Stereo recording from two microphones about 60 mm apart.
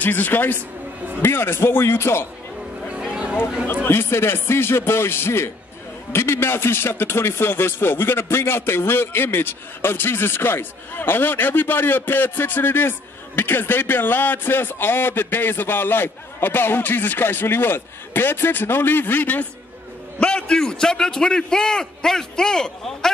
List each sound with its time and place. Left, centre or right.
0.0 s speech: left
3.1 s a sound: centre
3.6 s a man's voice: left
20.2 s a man's voice: centre